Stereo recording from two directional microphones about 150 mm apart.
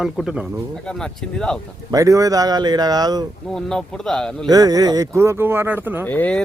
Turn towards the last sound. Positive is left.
turn(degrees=10)  # may be behind; listen again after turning